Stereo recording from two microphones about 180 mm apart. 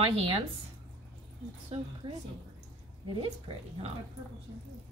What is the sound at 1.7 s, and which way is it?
Speech, 35° right (ahead or behind).